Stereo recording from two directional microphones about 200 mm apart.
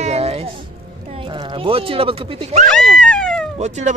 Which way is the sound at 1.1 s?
25° right (ahead or behind).